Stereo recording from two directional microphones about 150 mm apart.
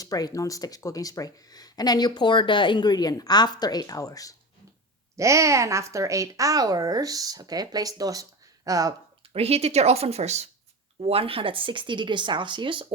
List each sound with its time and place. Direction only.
0.0 s speech: 25° left (ahead or behind)
5.1 s speech: 20° right (ahead or behind)
9.3 s a woman's voice: 45° right (ahead or behind)